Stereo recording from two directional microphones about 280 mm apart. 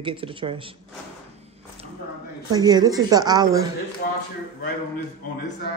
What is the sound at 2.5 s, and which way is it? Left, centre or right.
A man's voice, centre.